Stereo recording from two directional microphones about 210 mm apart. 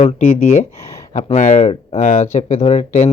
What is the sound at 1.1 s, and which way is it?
Speech, 35° left (ahead or behind).